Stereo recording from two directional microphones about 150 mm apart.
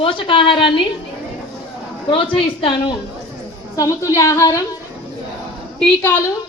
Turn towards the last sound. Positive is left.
turn(degrees=15)  # may be behind; listen again after turning